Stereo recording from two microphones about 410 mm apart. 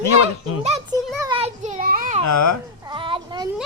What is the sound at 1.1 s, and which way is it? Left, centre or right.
Children playing, centre.